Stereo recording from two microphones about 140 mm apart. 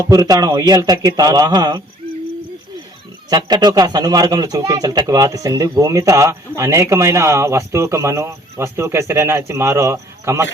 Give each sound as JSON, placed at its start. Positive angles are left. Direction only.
{"t": 0.0, "sound": "speech", "side_deg": -25}
{"t": 3.2, "sound": "speech", "side_deg": -30}